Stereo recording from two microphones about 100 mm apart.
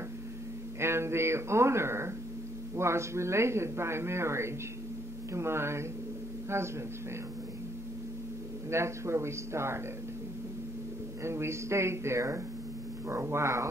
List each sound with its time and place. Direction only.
0.7 s a man's voice: 25° right (ahead or behind)
8.6 s a man's voice: 25° right (ahead or behind)
11.2 s a man's voice: 25° right (ahead or behind)